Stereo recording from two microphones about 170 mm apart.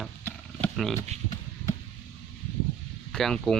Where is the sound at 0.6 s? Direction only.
40° right (ahead or behind).